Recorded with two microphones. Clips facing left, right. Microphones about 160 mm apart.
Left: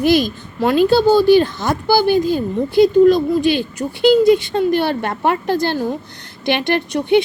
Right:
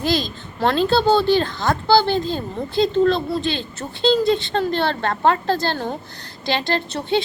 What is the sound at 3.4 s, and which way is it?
Speech, 15° left (ahead or behind).